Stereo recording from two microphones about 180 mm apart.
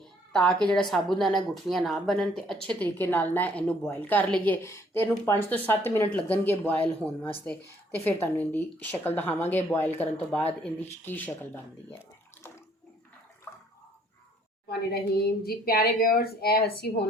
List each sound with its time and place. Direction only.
0.7 s a woman's voice: 5° left (ahead or behind)
13.5 s water: 15° left (ahead or behind)
14.7 s speech: 60° left (ahead or behind)